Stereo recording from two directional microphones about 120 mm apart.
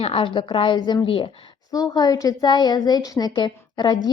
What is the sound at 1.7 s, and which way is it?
A woman's voice, 30° left (ahead or behind).